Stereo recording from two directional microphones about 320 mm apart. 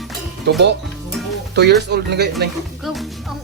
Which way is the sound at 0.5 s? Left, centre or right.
Right.